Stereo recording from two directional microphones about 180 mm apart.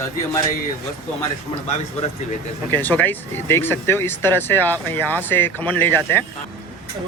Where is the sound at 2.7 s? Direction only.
10° left (ahead or behind).